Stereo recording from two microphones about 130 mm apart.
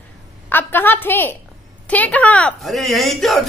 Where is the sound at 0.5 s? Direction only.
15° left (ahead or behind).